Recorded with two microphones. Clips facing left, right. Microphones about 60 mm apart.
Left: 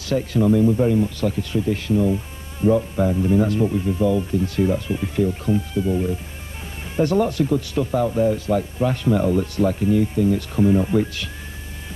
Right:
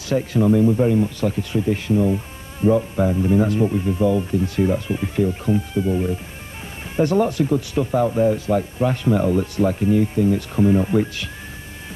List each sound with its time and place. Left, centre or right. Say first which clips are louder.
0.1 s speech: right 1 dB; right